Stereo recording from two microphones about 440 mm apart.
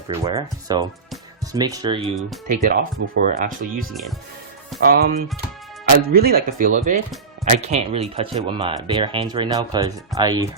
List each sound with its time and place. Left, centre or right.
0.1 s speech: centre